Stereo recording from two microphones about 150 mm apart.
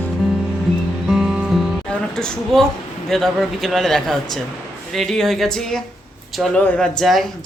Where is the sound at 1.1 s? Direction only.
5° right (ahead or behind).